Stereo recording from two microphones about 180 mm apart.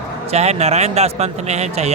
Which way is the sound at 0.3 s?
35° right (ahead or behind).